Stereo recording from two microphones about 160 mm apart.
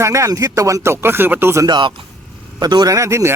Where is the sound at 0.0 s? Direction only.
20° right (ahead or behind).